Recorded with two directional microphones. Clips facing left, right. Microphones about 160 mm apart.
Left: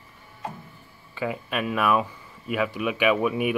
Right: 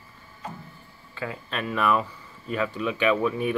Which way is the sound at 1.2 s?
10° left (ahead or behind).